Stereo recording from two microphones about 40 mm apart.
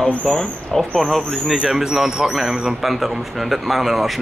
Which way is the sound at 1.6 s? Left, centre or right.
Centre.